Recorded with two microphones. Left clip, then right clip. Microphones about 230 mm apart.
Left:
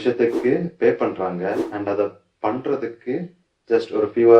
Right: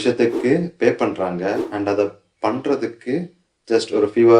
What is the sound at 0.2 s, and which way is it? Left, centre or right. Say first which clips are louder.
Speech: right 1 dB; right.